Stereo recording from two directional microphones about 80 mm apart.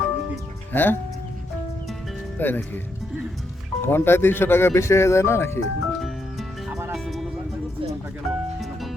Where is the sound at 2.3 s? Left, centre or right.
Left.